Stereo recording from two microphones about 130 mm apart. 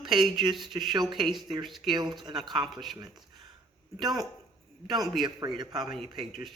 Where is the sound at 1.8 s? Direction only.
35° right (ahead or behind).